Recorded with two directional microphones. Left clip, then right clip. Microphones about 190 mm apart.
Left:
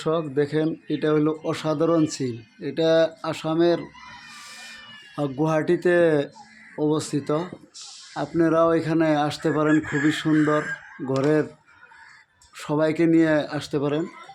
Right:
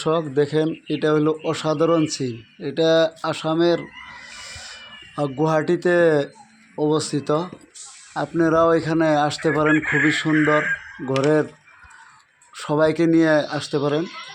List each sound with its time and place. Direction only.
0.0 s speech: 10° right (ahead or behind)
4.3 s a sound: 5° right (ahead or behind)
6.7 s speech: 5° right (ahead or behind)
10.3 s speech: 25° right (ahead or behind)
11.2 s speech: 5° right (ahead or behind)
12.5 s speech: 10° right (ahead or behind)